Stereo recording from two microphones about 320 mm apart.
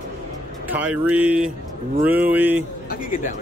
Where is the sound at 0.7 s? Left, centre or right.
Centre.